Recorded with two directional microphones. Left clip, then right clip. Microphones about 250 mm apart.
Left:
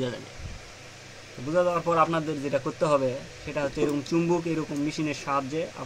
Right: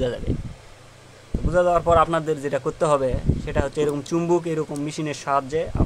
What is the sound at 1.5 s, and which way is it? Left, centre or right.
Speech, right.